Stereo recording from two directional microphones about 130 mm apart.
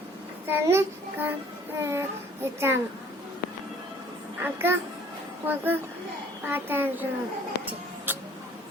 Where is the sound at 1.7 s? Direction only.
20° right (ahead or behind).